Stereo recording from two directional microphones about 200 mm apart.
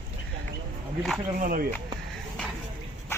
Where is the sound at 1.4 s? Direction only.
45° right (ahead or behind).